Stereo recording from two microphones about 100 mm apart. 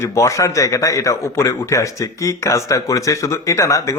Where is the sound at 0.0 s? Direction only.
30° left (ahead or behind).